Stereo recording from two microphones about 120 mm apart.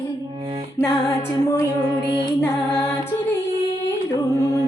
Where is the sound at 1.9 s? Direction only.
40° right (ahead or behind).